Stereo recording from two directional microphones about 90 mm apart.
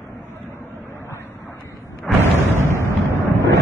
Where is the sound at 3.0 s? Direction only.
30° right (ahead or behind).